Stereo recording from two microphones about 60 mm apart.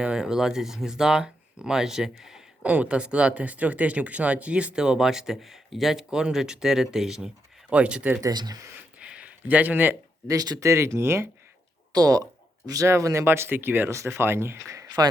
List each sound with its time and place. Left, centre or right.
0.0 s speech: centre
2.6 s speech: right; by 7.3 s centre
7.7 s speech: centre
8.2 s speech: right
9.0 s a sound: centre
10.2 s speech: right
11.9 s speech: right
12.9 s speech: right
13.2 s speech: right
14.7 s a sound: right